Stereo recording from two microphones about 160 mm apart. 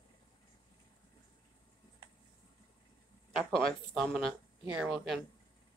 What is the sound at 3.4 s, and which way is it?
Speech, 5° left (ahead or behind).